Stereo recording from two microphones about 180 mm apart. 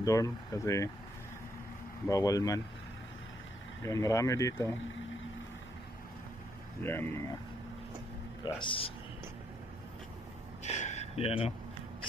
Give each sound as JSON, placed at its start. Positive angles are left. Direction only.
{"t": 0.0, "sound": "speech", "side_deg": 20}
{"t": 2.0, "sound": "speech", "side_deg": 20}
{"t": 3.8, "sound": "speech", "side_deg": 15}
{"t": 6.8, "sound": "speech", "side_deg": 10}
{"t": 8.5, "sound": "speech", "side_deg": 25}
{"t": 10.6, "sound": "a sound", "side_deg": 40}